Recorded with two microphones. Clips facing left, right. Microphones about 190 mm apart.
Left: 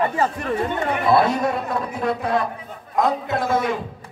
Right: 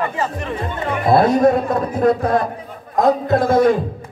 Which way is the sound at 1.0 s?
45° right (ahead or behind).